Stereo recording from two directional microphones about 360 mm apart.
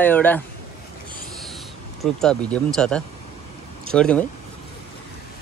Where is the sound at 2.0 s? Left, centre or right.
Centre.